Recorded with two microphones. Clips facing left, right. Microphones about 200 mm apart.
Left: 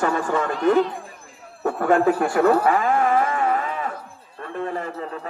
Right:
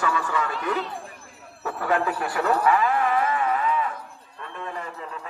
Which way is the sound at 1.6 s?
50° left (ahead or behind).